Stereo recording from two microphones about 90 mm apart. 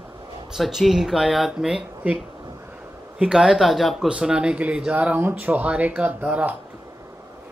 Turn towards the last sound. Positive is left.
turn(degrees=-15)  # may be behind; listen again after turning